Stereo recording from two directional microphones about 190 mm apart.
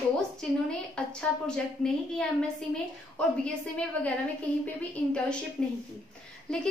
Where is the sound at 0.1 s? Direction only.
5° left (ahead or behind).